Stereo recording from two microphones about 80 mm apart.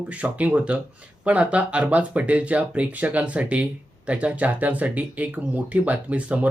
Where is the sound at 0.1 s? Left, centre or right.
Centre.